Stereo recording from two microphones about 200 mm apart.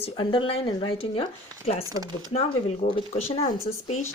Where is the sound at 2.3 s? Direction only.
30° left (ahead or behind).